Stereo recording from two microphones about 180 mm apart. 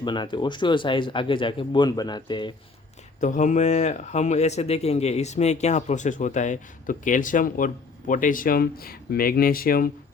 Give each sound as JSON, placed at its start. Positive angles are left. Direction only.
{"t": 0.0, "sound": "speech", "side_deg": 25}
{"t": 3.2, "sound": "speech", "side_deg": 45}